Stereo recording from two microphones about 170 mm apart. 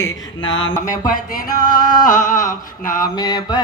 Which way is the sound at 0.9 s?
55° left (ahead or behind).